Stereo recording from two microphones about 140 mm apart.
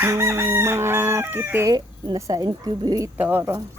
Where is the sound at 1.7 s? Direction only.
30° right (ahead or behind).